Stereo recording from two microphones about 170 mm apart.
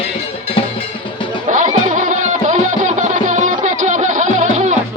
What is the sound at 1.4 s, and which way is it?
Music, 50° right (ahead or behind).